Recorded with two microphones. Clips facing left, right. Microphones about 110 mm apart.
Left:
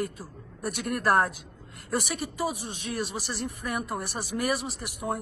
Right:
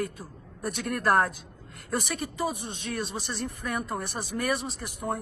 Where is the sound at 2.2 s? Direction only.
10° left (ahead or behind).